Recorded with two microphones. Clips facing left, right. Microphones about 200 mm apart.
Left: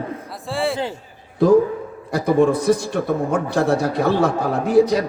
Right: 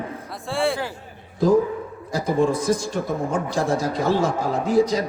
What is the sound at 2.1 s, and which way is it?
A man's voice, 60° left (ahead or behind).